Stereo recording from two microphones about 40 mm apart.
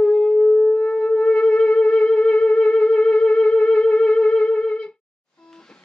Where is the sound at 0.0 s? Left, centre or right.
Left.